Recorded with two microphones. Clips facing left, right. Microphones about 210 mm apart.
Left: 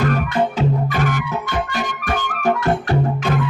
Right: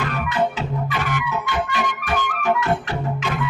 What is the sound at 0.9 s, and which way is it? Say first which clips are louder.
Music: left 4 dB; 45° left (ahead or behind).